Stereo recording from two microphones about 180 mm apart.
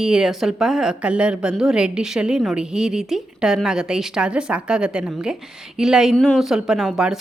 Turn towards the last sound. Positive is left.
turn(degrees=-5)  # may be behind; listen again after turning